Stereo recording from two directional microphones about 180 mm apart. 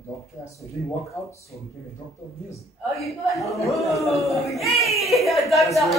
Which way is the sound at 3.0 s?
Centre (ahead or behind).